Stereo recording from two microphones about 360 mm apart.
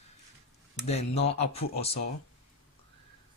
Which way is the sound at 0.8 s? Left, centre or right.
Centre.